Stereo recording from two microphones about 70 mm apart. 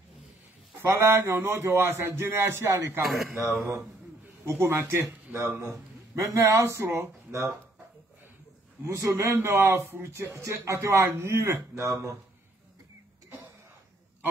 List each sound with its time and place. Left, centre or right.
0.9 s speech: right
3.1 s speech: centre
4.5 s speech: right
5.3 s speech: right
5.6 s speech: right
8.8 s speech: right